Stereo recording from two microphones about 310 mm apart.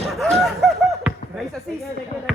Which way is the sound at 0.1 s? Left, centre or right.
Centre.